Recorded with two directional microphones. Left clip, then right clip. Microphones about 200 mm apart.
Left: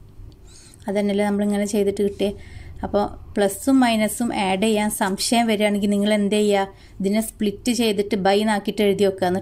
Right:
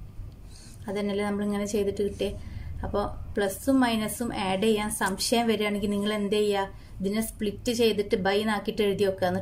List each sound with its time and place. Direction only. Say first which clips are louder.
0.8 s a woman's voice: left 8 dB; 40° left (ahead or behind)